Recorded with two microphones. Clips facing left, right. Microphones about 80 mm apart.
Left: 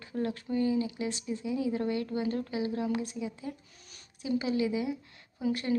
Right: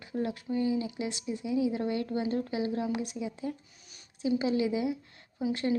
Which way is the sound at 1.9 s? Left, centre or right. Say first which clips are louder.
Right 1 dB; right.